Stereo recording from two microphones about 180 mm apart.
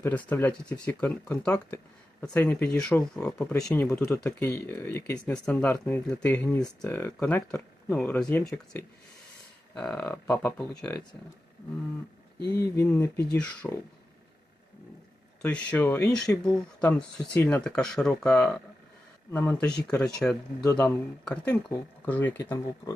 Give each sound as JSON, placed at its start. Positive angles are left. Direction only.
{"t": 0.0, "sound": "speech", "side_deg": 10}
{"t": 9.7, "sound": "speech", "side_deg": 5}
{"t": 12.7, "sound": "speech", "side_deg": 15}
{"t": 15.4, "sound": "speech", "side_deg": 5}
{"t": 22.4, "sound": "speech", "side_deg": 20}